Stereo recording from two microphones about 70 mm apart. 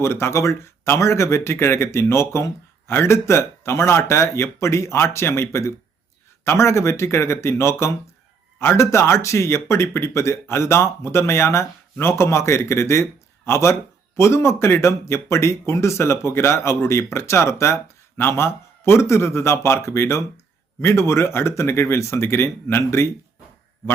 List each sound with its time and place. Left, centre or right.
0.0 s speech: left